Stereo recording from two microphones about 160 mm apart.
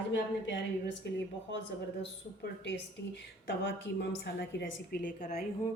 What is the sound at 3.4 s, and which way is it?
A woman's voice, 90° left.